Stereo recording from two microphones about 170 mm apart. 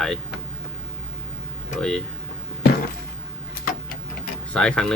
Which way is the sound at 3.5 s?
60° left (ahead or behind).